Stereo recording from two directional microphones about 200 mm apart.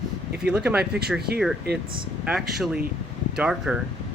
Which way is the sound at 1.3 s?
50° right (ahead or behind).